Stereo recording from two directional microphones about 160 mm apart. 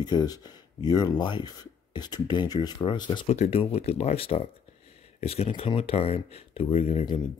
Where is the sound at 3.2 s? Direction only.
45° left (ahead or behind).